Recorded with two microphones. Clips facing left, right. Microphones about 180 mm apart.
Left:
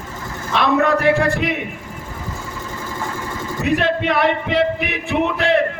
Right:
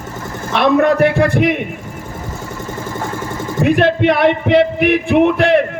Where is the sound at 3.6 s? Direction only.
55° right (ahead or behind).